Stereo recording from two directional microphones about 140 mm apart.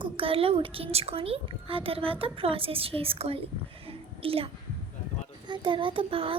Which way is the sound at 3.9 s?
40° right (ahead or behind).